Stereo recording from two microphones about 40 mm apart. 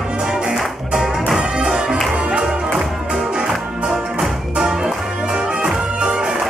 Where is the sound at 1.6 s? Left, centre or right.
Right.